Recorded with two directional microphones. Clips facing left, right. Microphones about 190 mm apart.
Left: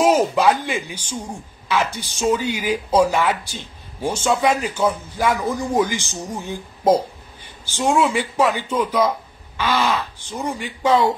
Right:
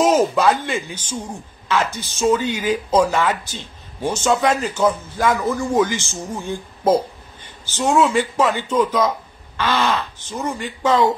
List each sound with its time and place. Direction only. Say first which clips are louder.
0.0 s speech: even; 15° left (ahead or behind)